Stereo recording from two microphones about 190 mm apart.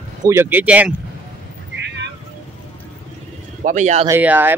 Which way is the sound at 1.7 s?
65° right (ahead or behind).